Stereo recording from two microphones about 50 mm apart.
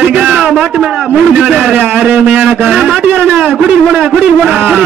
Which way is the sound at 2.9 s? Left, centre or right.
Right.